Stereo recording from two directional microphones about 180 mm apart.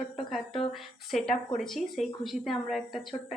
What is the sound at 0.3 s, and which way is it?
Speech, centre (ahead or behind).